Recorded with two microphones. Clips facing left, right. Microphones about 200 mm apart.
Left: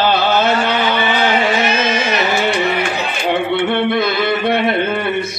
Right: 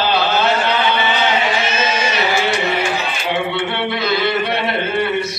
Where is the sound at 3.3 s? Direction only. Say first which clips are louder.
Left 5 dB; 55° left (ahead or behind).